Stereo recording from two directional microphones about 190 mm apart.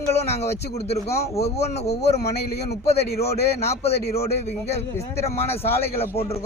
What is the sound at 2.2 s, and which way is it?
A man's voice, 60° left (ahead or behind).